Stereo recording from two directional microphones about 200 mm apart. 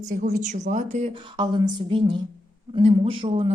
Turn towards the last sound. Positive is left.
turn(degrees=-30)  # may be behind; listen again after turning